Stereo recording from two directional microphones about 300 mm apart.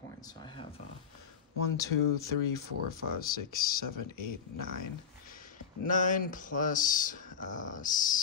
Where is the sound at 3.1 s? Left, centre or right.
Left.